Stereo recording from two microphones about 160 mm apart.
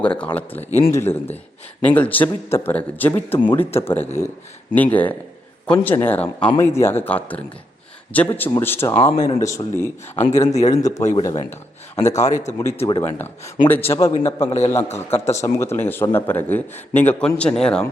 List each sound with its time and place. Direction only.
0.0 s a man's voice: 10° left (ahead or behind)
9.1 s speech: 25° left (ahead or behind)
10.5 s speech: 45° left (ahead or behind)
10.8 s speech: 20° left (ahead or behind)
12.1 s speech: 50° left (ahead or behind)
13.0 s a man's voice: 15° left (ahead or behind)